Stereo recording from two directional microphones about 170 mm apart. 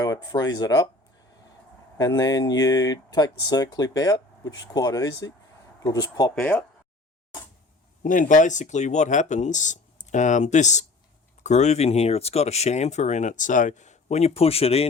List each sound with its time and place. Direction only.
0.0 s speech: 25° left (ahead or behind)
2.0 s speech: 20° left (ahead or behind)
6.4 s speech: 10° left (ahead or behind)
8.0 s speech: 50° left (ahead or behind)